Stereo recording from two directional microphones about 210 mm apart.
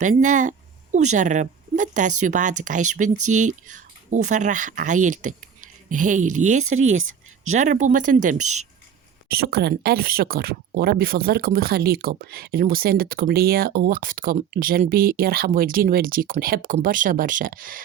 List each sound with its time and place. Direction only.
0.0 s speech: 35° right (ahead or behind)
6.7 s speech: 70° right (ahead or behind)
7.4 s speech: 35° right (ahead or behind)
9.3 s speech: 45° right (ahead or behind)